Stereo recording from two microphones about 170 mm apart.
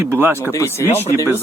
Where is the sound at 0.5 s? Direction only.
15° left (ahead or behind).